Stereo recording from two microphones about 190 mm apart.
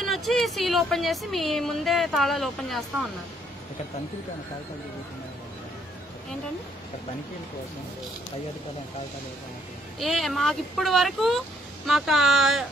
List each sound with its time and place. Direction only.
0.0 s speech: centre (ahead or behind)
9.9 s speech: centre (ahead or behind)